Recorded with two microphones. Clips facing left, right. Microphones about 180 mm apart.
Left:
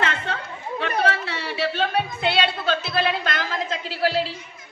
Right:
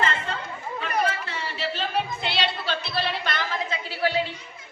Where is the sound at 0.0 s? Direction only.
70° left (ahead or behind).